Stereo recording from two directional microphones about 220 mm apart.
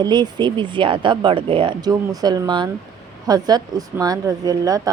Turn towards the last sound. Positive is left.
turn(degrees=-15)  # may be behind; listen again after turning